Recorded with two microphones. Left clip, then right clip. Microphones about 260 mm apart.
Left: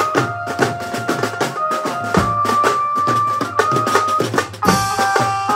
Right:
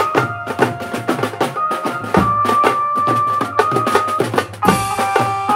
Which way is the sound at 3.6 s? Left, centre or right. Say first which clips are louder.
Even; right.